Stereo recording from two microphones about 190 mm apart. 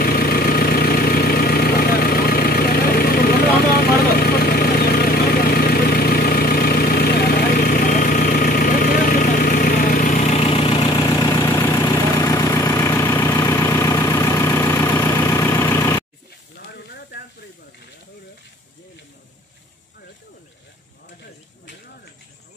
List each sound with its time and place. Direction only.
0.0 s vehicle: 50° left (ahead or behind); by 16.0 s 15° left (ahead or behind)
16.5 s hiss: 60° left (ahead or behind)